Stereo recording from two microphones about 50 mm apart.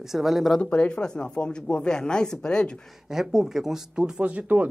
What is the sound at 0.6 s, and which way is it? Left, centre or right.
Speech, left.